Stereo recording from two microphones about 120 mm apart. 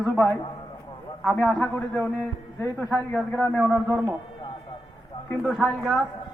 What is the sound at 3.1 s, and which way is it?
Speech, 15° left (ahead or behind).